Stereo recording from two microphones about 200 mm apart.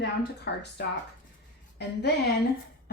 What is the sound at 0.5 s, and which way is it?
Speech, 55° left (ahead or behind).